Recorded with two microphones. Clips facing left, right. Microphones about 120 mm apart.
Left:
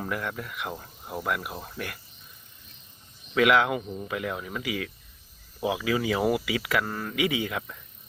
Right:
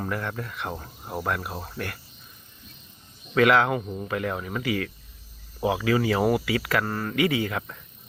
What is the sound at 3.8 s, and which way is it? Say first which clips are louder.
Speech: right 2 dB; 15° right (ahead or behind).